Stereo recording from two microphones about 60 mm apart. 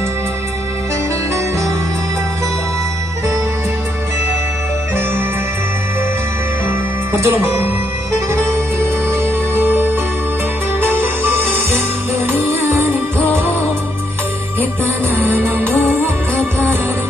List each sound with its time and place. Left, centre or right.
7.1 s speech: right
8.7 s music: right
11.2 s music: right
15.1 s music: right